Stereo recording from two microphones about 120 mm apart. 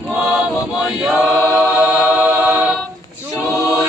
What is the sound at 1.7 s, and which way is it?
Choir, 15° right (ahead or behind).